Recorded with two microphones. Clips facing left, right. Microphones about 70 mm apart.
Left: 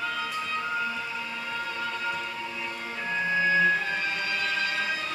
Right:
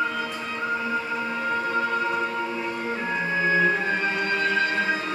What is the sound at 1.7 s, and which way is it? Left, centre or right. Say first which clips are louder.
Music: right 7 dB; right.